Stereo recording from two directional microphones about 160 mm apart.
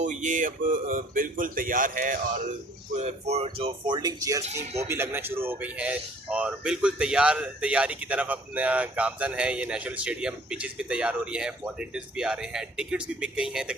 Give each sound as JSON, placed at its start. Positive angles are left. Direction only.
{"t": 0.0, "sound": "speech", "side_deg": -50}
{"t": 2.9, "sound": "speech", "side_deg": -45}